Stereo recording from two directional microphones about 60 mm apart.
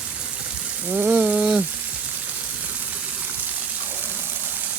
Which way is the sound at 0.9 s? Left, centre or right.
Right.